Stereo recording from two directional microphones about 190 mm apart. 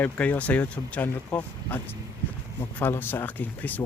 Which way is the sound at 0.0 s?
10° left (ahead or behind).